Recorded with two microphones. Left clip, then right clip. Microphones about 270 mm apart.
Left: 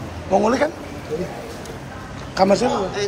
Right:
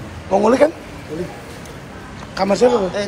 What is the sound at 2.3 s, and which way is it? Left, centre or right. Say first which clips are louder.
Speech: right 2 dB; centre.